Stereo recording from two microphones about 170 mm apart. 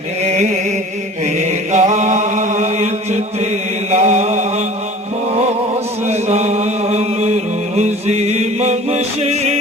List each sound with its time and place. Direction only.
1.2 s chant: 40° right (ahead or behind)
3.9 s mantra: 40° right (ahead or behind)
6.1 s chant: 40° right (ahead or behind)
7.8 s music: 40° right (ahead or behind)